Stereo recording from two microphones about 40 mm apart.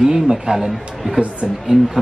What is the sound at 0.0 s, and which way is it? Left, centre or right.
Speech, centre.